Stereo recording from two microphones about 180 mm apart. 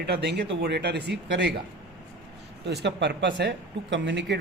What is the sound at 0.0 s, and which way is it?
A man's voice, 70° right (ahead or behind).